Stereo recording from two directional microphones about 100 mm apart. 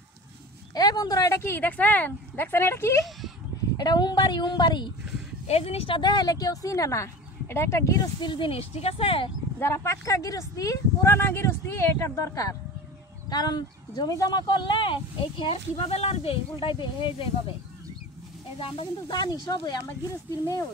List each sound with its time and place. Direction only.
0.7 s speech: 40° left (ahead or behind)
1.4 s speech: 20° left (ahead or behind)
3.7 s a woman's voice: 45° left (ahead or behind)
5.5 s speech: 85° left; by 8.1 s 30° left (ahead or behind)
8.2 s a woman's voice: 50° left (ahead or behind)
8.5 s speech: 75° left (ahead or behind)
9.6 s speech: 25° left (ahead or behind)
13.3 s speech: 45° left (ahead or behind); by 17.6 s 60° left (ahead or behind)
18.6 s speech: 65° left (ahead or behind)
19.1 s a woman's voice: 45° left (ahead or behind)